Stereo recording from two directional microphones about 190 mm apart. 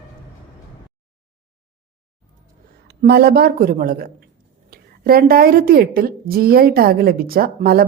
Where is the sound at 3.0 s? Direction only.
55° right (ahead or behind).